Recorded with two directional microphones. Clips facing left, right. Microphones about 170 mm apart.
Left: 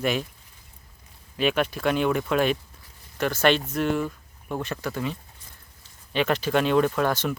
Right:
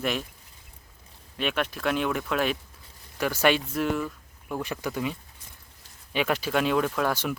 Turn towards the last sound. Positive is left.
turn(degrees=-5)  # may be behind; listen again after turning